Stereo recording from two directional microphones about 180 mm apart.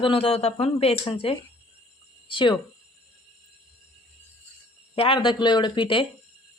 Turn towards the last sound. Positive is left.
turn(degrees=30)  # may be behind; listen again after turning